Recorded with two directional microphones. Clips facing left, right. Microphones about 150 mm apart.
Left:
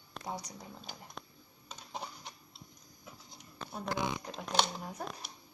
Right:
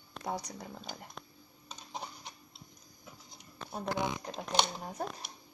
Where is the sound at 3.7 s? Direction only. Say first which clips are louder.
Right 1 dB; 35° right (ahead or behind).